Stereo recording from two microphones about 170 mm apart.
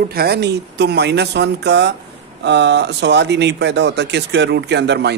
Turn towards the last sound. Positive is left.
turn(degrees=-85)